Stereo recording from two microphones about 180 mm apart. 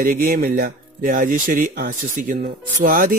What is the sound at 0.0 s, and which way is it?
Speech, 50° right (ahead or behind).